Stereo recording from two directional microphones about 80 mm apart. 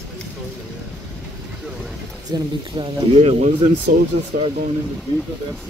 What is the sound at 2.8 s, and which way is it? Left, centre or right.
Speech, right.